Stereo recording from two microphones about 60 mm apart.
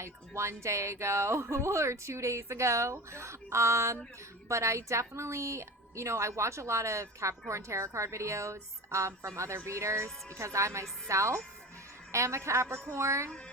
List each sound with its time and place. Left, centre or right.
0.0 s a woman's voice: right